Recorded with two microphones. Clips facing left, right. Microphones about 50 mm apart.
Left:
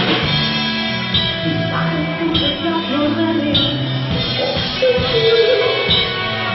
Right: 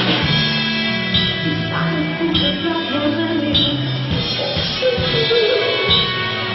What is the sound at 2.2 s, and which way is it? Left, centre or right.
Music, centre.